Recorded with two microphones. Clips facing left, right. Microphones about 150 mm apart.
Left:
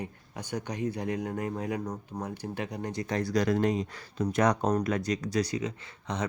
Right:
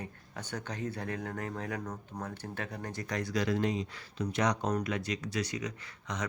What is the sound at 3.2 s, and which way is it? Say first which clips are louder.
Speech: left 4 dB; 40° left (ahead or behind).